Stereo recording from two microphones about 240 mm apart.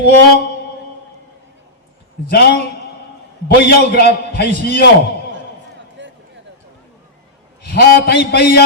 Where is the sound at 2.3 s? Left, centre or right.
Left.